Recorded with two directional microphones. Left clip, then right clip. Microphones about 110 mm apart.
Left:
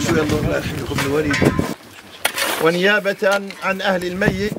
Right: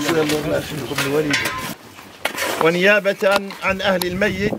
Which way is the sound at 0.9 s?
5° right (ahead or behind).